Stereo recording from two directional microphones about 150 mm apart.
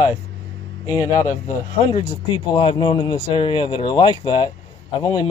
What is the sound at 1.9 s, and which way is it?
Speech, 35° left (ahead or behind).